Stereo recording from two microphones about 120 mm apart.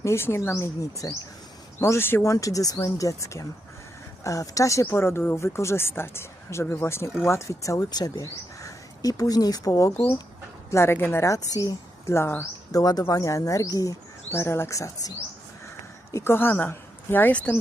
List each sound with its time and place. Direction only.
0.0 s speech: 20° left (ahead or behind)
16.1 s speech: 20° left (ahead or behind)